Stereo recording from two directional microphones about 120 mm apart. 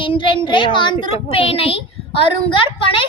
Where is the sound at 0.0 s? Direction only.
45° left (ahead or behind).